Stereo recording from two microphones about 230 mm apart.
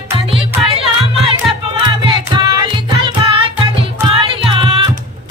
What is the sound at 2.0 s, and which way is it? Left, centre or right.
Music, right.